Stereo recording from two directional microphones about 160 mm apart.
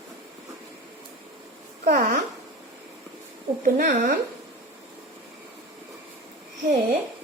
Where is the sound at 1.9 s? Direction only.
60° right (ahead or behind).